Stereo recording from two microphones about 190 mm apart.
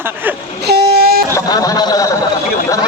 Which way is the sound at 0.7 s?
55° right (ahead or behind).